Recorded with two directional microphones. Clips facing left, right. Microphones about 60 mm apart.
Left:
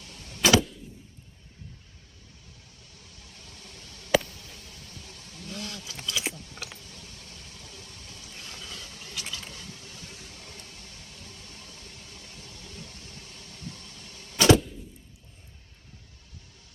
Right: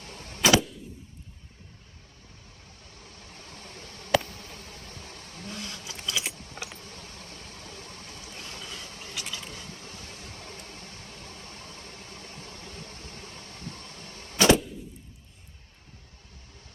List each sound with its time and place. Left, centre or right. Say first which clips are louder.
0.0 s vehicle: right 3 dB; right
2.9 s a sound: right 4 dB; right
4.2 s bee: right 3 dB; right
6.3 s keys jangling: even; right
6.7 s vehicle: right 3 dB; right